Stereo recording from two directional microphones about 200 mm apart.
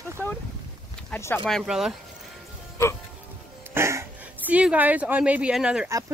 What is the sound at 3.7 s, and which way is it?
Speech, 10° right (ahead or behind).